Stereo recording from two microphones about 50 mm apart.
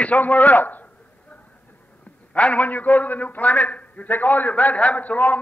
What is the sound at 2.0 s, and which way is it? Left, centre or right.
A man's voice, left.